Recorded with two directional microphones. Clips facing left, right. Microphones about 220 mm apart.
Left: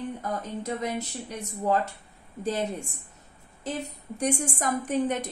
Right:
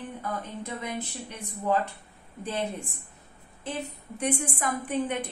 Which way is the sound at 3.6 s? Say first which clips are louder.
Left 2 dB; 40° left (ahead or behind).